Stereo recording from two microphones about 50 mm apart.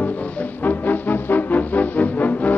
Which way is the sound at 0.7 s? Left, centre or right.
Left.